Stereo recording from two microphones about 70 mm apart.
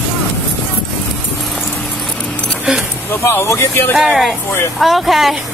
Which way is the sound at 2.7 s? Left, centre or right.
Centre.